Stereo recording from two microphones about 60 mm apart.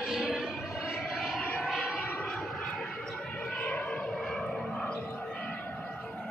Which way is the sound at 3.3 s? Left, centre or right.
Left.